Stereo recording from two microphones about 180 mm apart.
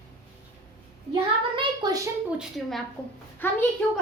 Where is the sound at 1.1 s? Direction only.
25° right (ahead or behind).